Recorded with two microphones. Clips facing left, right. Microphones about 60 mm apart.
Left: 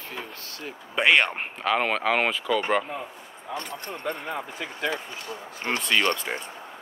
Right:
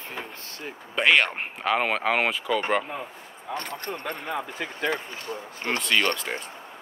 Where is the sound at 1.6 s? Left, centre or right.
Centre.